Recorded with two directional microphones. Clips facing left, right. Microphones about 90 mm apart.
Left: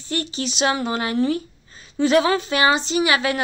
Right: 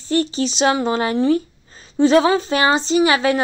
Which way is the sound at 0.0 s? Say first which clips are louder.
Right 7 dB; 35° right (ahead or behind).